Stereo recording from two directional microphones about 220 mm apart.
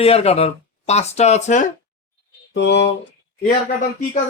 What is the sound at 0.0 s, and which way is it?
Speech, 25° left (ahead or behind).